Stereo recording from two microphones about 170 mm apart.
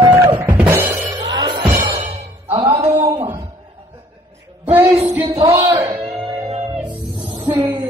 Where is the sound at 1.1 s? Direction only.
25° right (ahead or behind).